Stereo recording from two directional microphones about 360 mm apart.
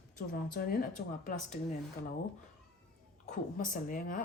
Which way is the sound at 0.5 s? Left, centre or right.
Left.